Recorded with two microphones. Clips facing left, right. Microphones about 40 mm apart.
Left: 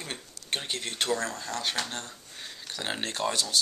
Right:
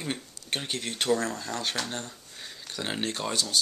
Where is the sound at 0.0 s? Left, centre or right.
Centre.